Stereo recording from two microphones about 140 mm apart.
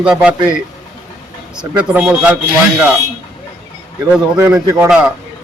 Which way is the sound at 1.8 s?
10° right (ahead or behind).